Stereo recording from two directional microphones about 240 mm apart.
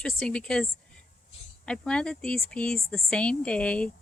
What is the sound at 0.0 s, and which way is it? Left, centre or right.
Speech, centre.